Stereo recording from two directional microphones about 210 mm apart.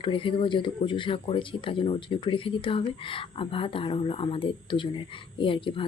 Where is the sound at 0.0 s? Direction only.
25° left (ahead or behind).